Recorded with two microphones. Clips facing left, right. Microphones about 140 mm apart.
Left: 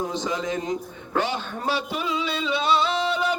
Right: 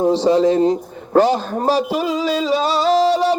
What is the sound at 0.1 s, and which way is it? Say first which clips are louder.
A man's voice: right 13 dB; 35° right (ahead or behind).